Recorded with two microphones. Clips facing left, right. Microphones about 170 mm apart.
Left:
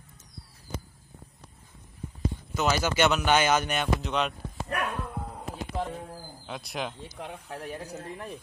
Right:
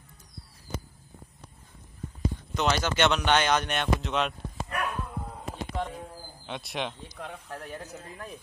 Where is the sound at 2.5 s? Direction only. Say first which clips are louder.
Left 1 dB; 5° left (ahead or behind).